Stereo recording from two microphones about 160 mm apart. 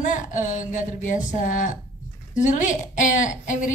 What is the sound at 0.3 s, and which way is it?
A woman's voice, 50° left (ahead or behind).